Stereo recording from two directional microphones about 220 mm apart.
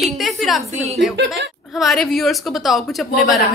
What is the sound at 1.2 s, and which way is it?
Speech, 50° right (ahead or behind).